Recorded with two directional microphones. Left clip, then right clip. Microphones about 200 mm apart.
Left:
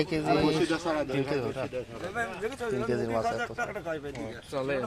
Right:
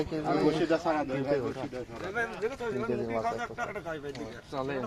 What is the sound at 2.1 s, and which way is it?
Speech, 40° right (ahead or behind).